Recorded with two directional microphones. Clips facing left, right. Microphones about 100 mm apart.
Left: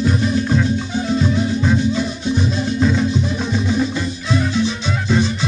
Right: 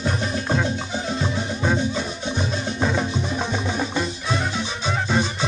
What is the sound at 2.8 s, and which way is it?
Music, 25° right (ahead or behind).